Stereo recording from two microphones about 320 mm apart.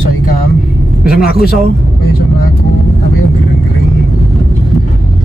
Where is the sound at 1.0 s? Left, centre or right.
Left.